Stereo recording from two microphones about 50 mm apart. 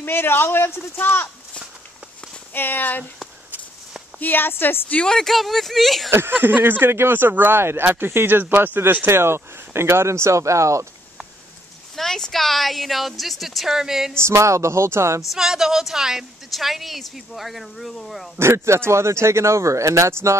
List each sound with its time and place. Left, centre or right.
0.0 s speech: left
0.9 s speech: left
2.5 s speech: left
4.2 s speech: left
5.0 s a woman's voice: centre
6.0 s speech: right
9.0 s speech: right
11.9 s a woman's voice: centre
14.1 s speech: right
15.3 s a woman's voice: centre
18.4 s speech: right